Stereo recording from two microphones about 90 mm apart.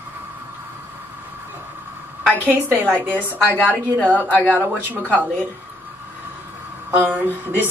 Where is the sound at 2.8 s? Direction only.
20° right (ahead or behind).